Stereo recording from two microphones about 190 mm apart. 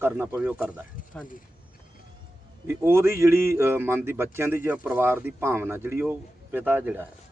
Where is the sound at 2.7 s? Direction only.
10° right (ahead or behind).